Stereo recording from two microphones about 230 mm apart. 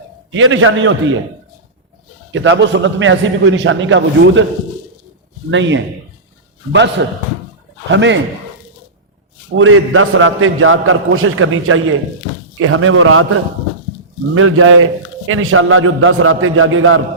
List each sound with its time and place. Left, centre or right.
0.3 s a man's voice: right
2.3 s a man's voice: right
5.5 s a man's voice: right
7.0 s a man's voice: right
9.6 s a man's voice: right
14.3 s a man's voice: right